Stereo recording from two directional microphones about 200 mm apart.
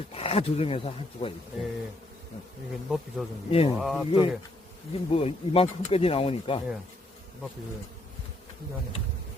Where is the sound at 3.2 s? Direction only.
Centre (ahead or behind).